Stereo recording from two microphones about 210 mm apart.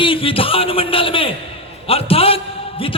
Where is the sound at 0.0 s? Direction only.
25° left (ahead or behind).